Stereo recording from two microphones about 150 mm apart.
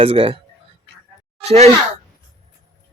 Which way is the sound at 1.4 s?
45° right (ahead or behind).